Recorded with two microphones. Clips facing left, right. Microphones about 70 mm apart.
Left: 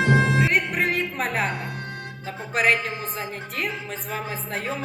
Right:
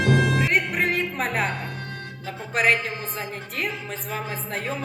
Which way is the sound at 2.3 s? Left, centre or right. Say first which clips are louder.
Even; centre.